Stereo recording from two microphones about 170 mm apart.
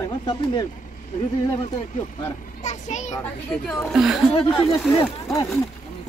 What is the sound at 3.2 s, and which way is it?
Speech, 5° left (ahead or behind).